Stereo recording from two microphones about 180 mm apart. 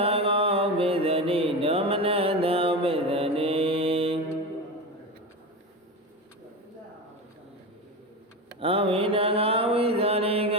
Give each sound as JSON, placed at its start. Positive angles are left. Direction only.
{"t": 0.0, "sound": "mantra", "side_deg": -30}
{"t": 8.6, "sound": "mantra", "side_deg": -30}